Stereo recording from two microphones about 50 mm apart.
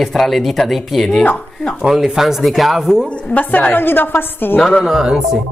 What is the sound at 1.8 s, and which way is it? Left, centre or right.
Speech, centre.